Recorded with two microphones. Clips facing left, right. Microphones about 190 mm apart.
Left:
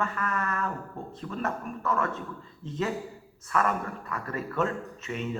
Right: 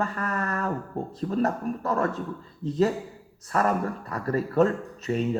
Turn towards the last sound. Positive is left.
turn(degrees=-35)  # may be behind; listen again after turning